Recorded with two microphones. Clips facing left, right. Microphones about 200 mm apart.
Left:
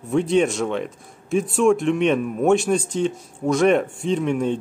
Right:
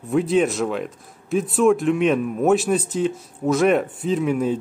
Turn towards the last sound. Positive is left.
turn(degrees=-5)  # may be behind; listen again after turning